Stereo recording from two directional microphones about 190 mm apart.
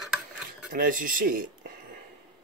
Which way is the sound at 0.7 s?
45° right (ahead or behind).